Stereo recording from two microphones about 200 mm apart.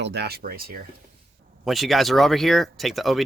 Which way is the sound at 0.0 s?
55° right (ahead or behind).